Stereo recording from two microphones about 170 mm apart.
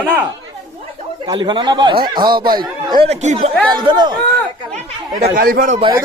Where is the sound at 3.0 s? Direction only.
40° right (ahead or behind).